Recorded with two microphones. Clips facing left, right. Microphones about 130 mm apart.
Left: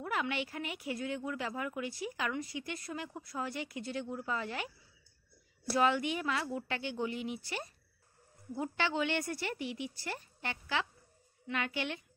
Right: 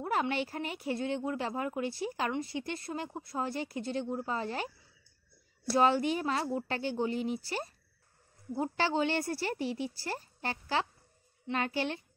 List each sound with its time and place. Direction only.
0.0 s a woman's voice: 35° right (ahead or behind)
5.7 s a woman's voice: 30° right (ahead or behind)